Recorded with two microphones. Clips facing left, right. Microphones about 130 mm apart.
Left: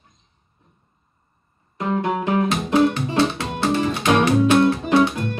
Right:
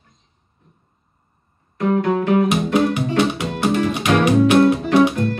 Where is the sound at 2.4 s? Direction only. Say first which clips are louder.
Right 1 dB; 15° right (ahead or behind).